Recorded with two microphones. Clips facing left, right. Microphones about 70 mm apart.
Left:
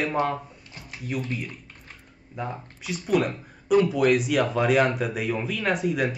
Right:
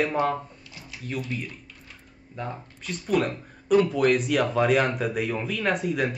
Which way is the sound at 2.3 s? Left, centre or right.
Centre.